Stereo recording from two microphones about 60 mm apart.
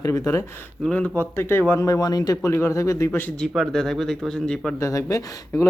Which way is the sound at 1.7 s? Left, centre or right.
Left.